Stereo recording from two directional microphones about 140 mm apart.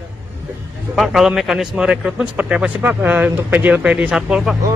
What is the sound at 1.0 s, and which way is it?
A man's voice, centre (ahead or behind).